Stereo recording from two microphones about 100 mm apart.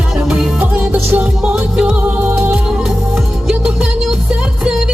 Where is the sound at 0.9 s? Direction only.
15° right (ahead or behind).